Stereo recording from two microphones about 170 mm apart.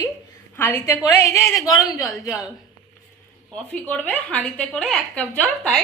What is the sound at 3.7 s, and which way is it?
A woman's voice, 10° left (ahead or behind).